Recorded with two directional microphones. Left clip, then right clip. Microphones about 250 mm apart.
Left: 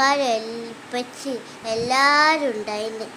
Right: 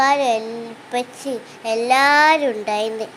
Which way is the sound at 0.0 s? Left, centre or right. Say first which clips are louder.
Right 3 dB; centre.